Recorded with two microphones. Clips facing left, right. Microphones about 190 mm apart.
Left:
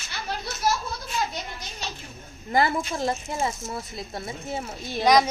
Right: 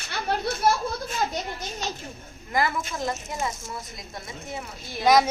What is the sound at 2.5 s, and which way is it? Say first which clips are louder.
Speech: left 3 dB; 30° left (ahead or behind).